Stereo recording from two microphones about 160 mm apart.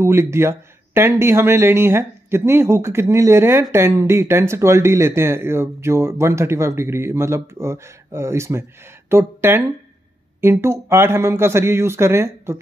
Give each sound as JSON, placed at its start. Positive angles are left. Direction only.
{"t": 0.0, "sound": "speech", "side_deg": -15}